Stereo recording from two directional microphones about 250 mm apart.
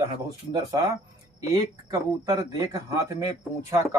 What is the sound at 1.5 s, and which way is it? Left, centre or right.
A man's voice, centre.